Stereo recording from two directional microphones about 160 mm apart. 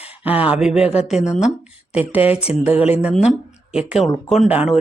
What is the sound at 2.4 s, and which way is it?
Speech, 40° left (ahead or behind).